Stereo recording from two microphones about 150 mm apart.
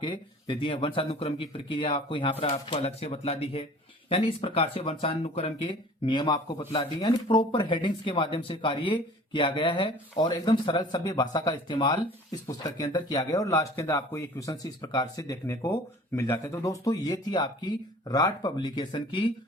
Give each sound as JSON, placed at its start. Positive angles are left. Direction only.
{"t": 0.0, "sound": "a man's voice", "side_deg": 35}